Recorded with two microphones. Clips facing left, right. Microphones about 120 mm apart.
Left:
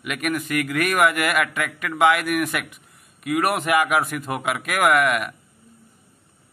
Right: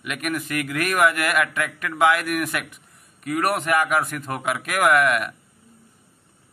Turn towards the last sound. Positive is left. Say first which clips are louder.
# even
turn(degrees=0)  # may be behind; listen again after turning